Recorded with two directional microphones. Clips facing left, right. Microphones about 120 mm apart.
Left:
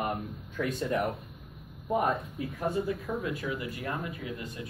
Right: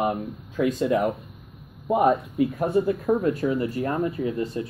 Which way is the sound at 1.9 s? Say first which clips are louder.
Right 8 dB; 80° right.